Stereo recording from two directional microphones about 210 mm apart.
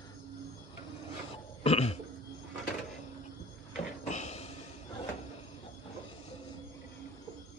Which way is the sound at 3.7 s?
35° left (ahead or behind).